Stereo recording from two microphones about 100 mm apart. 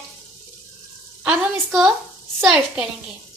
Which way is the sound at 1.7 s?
5° right (ahead or behind).